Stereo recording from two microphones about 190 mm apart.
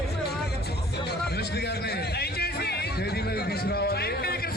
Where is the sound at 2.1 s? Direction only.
55° left (ahead or behind).